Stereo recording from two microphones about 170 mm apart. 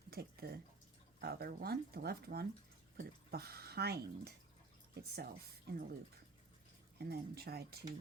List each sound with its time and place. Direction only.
0.1 s speech: 65° right (ahead or behind)
7.0 s speech: 70° right (ahead or behind)